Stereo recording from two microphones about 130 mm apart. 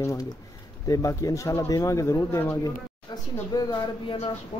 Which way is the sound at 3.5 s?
30° left (ahead or behind).